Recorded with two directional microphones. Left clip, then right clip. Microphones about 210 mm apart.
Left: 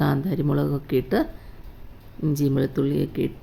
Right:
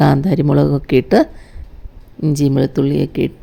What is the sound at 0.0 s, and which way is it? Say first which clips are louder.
Speech: right 10 dB; 35° right (ahead or behind).